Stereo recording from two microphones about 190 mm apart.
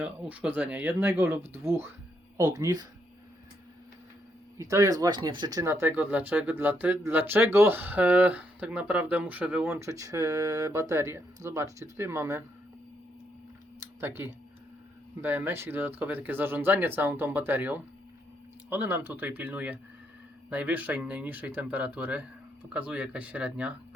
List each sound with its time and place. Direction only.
0.0 s speech: 5° right (ahead or behind)
4.5 s speech: 15° right (ahead or behind)
14.0 s speech: 10° right (ahead or behind)